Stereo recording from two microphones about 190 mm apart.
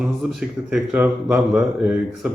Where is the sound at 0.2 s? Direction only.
Centre (ahead or behind).